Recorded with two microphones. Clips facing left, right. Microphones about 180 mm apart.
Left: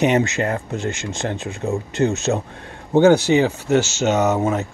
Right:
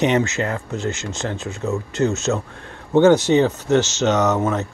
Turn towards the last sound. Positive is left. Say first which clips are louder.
# left 1 dB
turn(degrees=10)  # may be behind; listen again after turning